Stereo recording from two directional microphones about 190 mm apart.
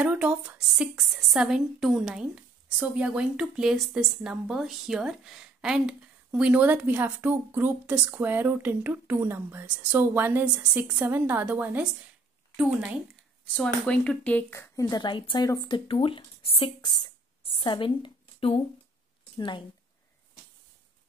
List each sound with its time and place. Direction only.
0.0 s a woman's voice: 5° right (ahead or behind)
13.6 s speech: 5° left (ahead or behind); by 16.9 s 30° left (ahead or behind)
17.5 s a sound: 30° left (ahead or behind)
19.3 s speech: 25° left (ahead or behind)